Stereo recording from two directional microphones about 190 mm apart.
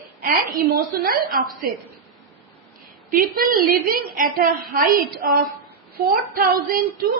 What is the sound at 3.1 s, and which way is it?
A woman's voice, 50° right (ahead or behind).